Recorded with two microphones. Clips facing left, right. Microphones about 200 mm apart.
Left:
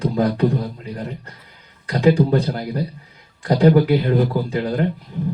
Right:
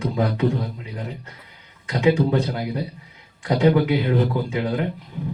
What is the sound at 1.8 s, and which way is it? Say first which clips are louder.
A man's voice: left 3 dB; 35° left (ahead or behind).